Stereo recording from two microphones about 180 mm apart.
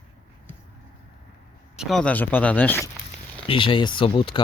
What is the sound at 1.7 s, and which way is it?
Speech, centre (ahead or behind).